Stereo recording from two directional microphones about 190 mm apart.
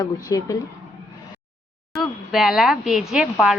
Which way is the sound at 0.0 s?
20° left (ahead or behind).